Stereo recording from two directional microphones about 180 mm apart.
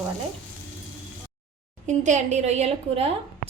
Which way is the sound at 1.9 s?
40° right (ahead or behind).